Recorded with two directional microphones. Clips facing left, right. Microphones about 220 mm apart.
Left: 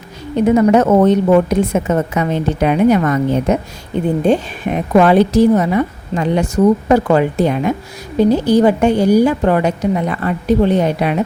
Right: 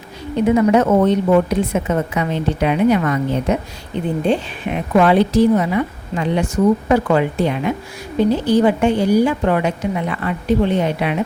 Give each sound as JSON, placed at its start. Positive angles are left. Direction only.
{"t": 0.5, "sound": "a woman's voice", "side_deg": 40}